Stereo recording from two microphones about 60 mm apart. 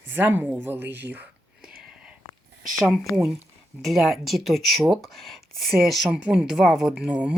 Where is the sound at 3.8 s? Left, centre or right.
Centre.